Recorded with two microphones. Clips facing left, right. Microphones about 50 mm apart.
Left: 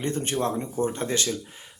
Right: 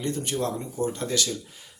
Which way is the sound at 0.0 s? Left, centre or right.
Left.